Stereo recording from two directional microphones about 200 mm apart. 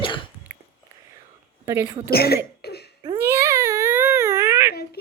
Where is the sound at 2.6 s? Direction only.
55° left (ahead or behind).